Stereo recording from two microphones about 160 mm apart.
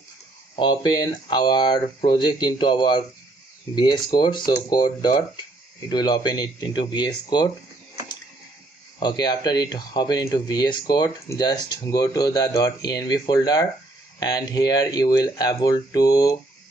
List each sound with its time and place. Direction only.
0.6 s speech: 25° left (ahead or behind)
9.0 s speech: 25° left (ahead or behind)